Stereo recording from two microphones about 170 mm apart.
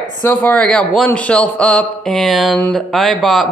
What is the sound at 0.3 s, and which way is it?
A man's voice, 10° left (ahead or behind).